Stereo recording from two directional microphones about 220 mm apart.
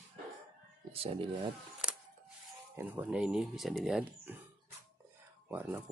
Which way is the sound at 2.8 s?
10° right (ahead or behind).